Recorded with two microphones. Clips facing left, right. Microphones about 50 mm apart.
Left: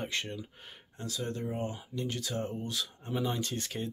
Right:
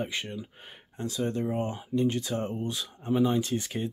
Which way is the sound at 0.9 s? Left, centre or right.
Right.